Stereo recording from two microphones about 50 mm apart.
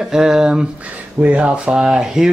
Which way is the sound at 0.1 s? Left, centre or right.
Centre.